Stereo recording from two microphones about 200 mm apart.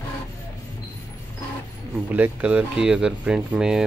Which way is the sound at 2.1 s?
5° right (ahead or behind).